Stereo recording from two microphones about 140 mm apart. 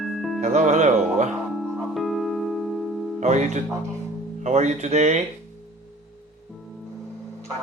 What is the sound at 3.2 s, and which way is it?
Speech, 55° right (ahead or behind).